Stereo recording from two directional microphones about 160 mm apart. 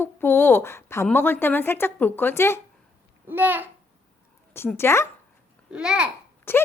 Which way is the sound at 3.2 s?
10° right (ahead or behind).